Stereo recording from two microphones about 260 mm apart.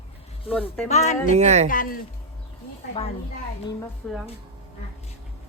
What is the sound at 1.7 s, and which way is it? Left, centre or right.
Speech, left.